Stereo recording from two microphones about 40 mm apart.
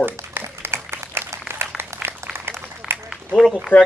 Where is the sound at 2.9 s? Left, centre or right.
Right.